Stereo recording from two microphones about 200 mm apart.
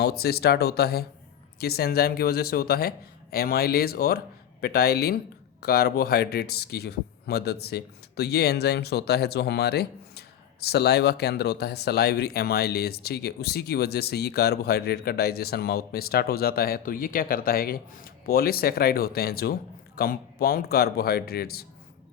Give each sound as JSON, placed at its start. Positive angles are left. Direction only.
{"t": 0.0, "sound": "speech", "side_deg": 50}